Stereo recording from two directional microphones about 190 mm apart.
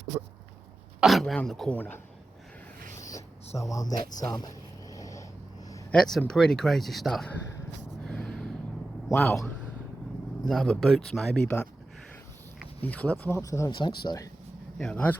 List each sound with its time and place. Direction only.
1.0 s speech: centre (ahead or behind)
3.6 s speech: 15° left (ahead or behind)
4.2 s vehicle: 20° left (ahead or behind)
5.9 s speech: centre (ahead or behind)
8.0 s a sound: 5° left (ahead or behind)
9.1 s speech: 5° left (ahead or behind)
10.5 s speech: centre (ahead or behind)
12.8 s speech: 10° left (ahead or behind)
14.8 s speech: 5° left (ahead or behind)